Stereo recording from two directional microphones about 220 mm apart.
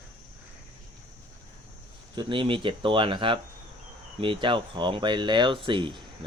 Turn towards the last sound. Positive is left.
turn(degrees=-20)  # may be behind; listen again after turning